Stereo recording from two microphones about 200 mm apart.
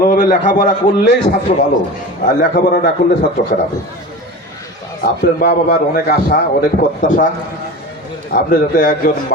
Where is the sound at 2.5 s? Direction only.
50° left (ahead or behind).